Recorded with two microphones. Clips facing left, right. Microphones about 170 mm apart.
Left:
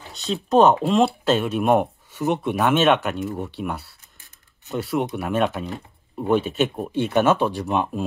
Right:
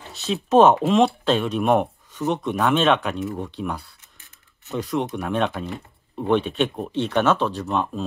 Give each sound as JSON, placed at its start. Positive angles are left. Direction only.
{"t": 0.1, "sound": "speech", "side_deg": 0}